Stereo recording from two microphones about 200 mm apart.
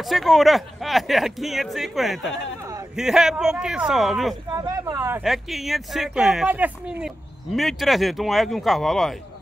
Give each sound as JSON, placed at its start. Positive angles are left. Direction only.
{"t": 0.0, "sound": "speech", "side_deg": 0}
{"t": 4.6, "sound": "speech", "side_deg": -20}
{"t": 5.2, "sound": "speech", "side_deg": 0}